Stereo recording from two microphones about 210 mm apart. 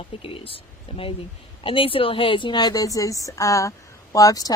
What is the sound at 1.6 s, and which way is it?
A woman's voice, 25° left (ahead or behind).